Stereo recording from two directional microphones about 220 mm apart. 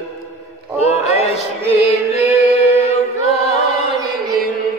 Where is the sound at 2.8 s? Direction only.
30° left (ahead or behind).